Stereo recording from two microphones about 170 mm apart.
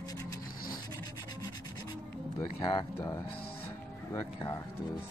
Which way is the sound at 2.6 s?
25° left (ahead or behind).